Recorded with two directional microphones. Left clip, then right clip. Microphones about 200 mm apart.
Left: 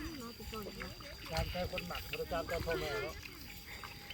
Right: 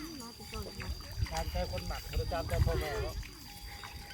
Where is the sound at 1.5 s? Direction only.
45° left (ahead or behind).